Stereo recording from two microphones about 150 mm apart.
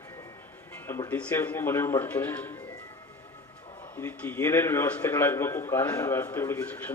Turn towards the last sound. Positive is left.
turn(degrees=10)  # may be behind; listen again after turning